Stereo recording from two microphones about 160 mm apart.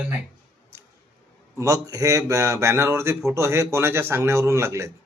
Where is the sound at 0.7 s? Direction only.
15° right (ahead or behind).